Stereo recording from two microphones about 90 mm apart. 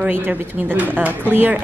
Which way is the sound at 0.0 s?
15° right (ahead or behind).